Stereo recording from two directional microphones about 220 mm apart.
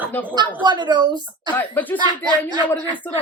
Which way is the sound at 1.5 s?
10° left (ahead or behind).